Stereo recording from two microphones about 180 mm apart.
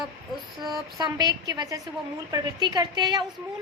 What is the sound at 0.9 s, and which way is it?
A woman's voice, 20° right (ahead or behind).